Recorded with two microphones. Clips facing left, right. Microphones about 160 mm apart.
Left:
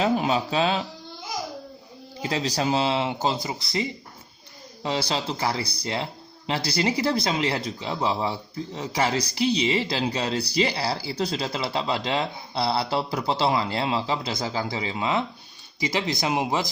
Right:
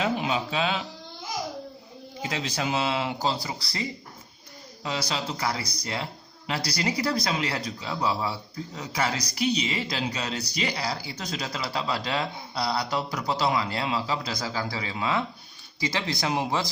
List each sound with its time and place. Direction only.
0.0 s speech: 40° left (ahead or behind)
2.2 s speech: 35° left (ahead or behind); by 16.6 s 20° left (ahead or behind)